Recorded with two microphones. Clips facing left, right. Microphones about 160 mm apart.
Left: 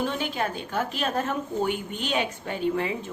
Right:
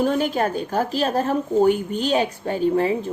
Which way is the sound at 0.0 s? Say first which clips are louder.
Right 7 dB; 45° right (ahead or behind).